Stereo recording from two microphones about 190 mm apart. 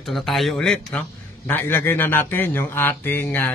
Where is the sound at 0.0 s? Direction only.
Centre (ahead or behind).